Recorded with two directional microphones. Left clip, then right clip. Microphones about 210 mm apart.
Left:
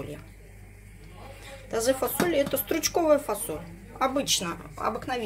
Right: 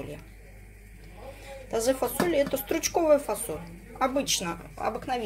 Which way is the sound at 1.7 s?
Centre (ahead or behind).